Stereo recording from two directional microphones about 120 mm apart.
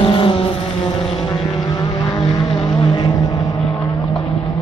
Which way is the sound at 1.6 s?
40° left (ahead or behind).